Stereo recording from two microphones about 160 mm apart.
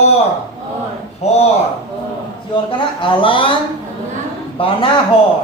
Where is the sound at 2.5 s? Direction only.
30° left (ahead or behind).